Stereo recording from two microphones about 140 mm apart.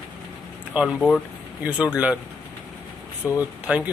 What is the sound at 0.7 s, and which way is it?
Speech, 10° right (ahead or behind).